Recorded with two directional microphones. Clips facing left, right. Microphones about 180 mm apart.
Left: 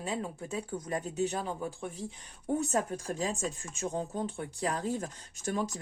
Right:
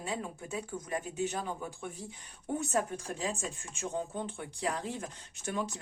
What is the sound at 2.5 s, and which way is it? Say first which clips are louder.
Speech: left 1 dB; 40° left (ahead or behind).